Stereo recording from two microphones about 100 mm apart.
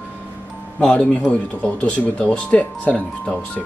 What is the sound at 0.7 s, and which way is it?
Speech, 10° left (ahead or behind).